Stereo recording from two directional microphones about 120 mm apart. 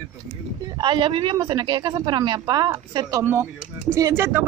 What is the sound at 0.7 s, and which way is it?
Speech, 40° right (ahead or behind).